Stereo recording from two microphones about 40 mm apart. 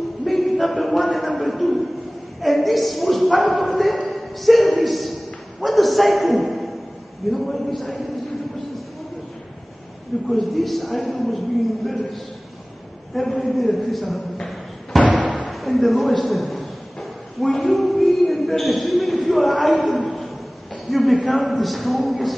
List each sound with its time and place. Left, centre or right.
0.2 s a sound: centre
0.7 s music: centre
2.4 s a sound: centre
4.1 s a man's voice: centre
10.2 s a man's voice: centre
15.1 s slam: right
15.5 s a man's voice: centre
20.9 s a man's voice: centre